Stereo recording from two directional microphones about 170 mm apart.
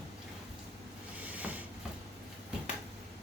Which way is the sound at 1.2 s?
10° right (ahead or behind).